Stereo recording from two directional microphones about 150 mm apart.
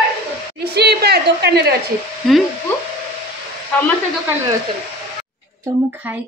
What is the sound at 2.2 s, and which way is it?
Speech, centre (ahead or behind).